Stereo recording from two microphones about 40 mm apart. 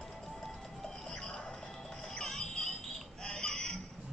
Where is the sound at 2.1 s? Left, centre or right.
Centre.